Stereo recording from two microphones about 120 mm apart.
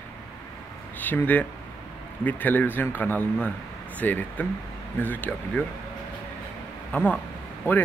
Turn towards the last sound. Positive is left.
turn(degrees=20)  # may be behind; listen again after turning